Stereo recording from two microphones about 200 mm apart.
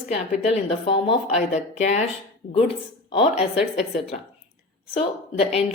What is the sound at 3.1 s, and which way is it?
A woman's voice, 30° left (ahead or behind).